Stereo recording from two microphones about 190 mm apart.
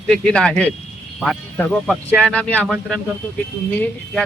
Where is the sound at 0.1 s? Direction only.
5° left (ahead or behind).